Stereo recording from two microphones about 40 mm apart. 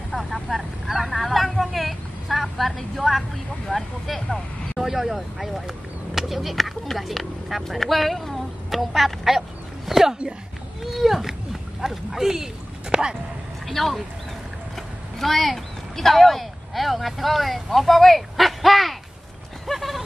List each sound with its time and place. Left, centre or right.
0.1 s speech: centre
4.7 s speech: centre
12.9 s speech: right
13.7 s speech: centre
15.1 s speech: centre
19.7 s a sound: centre